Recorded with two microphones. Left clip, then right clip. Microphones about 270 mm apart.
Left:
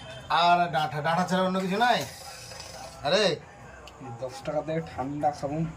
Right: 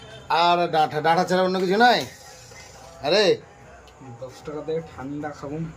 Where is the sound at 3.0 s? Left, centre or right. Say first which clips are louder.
Right 5 dB; centre.